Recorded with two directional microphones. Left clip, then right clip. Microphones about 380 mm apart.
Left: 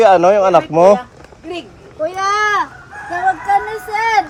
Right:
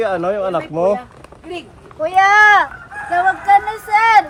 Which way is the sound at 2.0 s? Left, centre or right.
Right.